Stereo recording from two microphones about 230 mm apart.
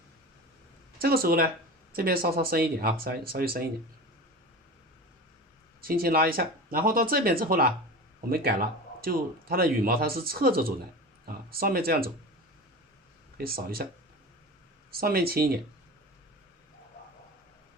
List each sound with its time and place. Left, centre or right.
0.9 s speech: right
5.8 s speech: right
13.4 s speech: right
14.9 s speech: right